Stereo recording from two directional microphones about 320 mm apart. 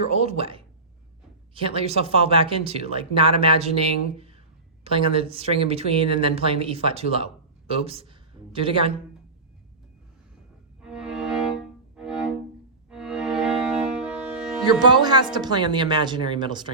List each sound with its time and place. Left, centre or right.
0.2 s speech: centre
10.8 s music: centre
14.6 s speech: centre